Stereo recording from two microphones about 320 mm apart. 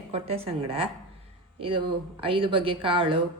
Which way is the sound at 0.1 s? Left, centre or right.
Centre.